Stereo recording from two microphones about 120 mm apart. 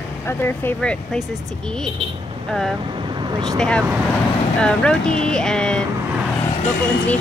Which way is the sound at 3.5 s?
5° left (ahead or behind).